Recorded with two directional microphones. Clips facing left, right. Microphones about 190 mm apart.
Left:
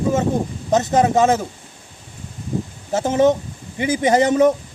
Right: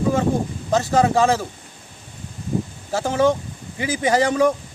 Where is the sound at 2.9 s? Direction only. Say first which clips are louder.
Left 3 dB; 20° left (ahead or behind).